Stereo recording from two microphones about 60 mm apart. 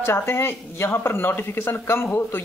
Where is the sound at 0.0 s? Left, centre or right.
Left.